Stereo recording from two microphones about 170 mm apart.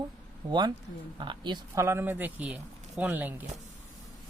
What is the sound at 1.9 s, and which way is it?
Speech, 15° right (ahead or behind).